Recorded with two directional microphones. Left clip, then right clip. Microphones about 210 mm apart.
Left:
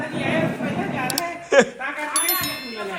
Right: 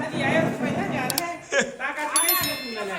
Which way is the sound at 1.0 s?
5° right (ahead or behind).